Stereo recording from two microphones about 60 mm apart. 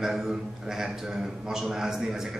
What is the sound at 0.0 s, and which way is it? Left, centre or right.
A man's voice, centre.